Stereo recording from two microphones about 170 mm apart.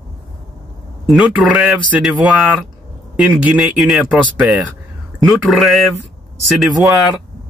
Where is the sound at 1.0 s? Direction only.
Centre (ahead or behind).